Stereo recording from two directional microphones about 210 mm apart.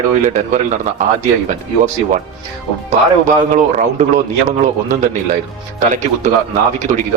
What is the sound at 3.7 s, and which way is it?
Speech, 35° right (ahead or behind).